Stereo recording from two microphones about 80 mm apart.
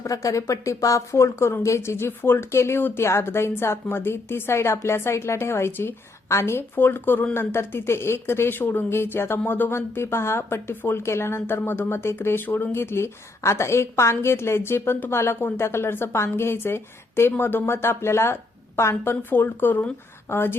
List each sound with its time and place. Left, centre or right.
0.0 s a woman's voice: left